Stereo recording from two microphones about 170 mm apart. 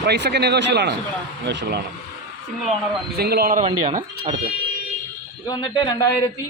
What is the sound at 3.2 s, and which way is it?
Speech, 65° right (ahead or behind).